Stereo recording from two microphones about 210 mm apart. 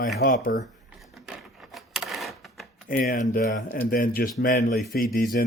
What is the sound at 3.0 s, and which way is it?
Speech, 40° left (ahead or behind).